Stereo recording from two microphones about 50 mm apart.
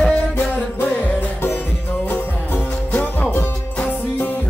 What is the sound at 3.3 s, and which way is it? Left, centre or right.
Music, left.